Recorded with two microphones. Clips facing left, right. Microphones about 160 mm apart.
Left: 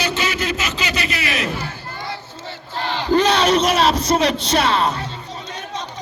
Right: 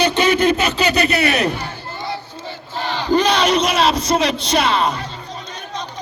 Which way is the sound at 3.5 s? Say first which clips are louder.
Even; 10° right (ahead or behind).